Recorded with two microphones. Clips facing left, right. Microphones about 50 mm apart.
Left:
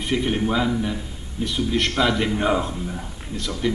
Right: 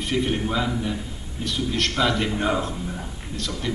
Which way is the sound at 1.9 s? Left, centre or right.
Centre.